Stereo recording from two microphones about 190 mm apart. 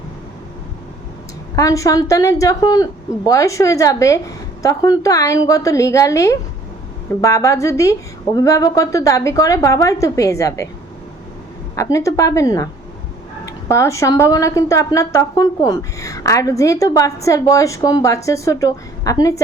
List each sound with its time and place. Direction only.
1.5 s speech: 15° left (ahead or behind)
11.8 s speech: 15° left (ahead or behind)